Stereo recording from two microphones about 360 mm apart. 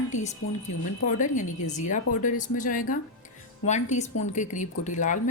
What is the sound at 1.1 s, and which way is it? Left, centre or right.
Speech, left.